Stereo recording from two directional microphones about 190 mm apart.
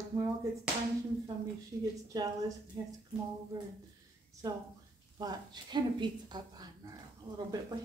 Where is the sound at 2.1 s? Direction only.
20° right (ahead or behind).